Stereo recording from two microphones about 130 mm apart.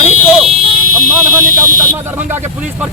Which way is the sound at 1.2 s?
20° right (ahead or behind).